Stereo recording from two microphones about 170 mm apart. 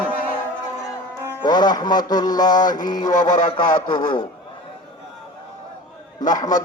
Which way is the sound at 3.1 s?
45° left (ahead or behind).